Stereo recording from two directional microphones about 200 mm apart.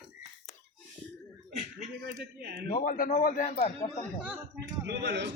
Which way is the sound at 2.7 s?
45° left (ahead or behind).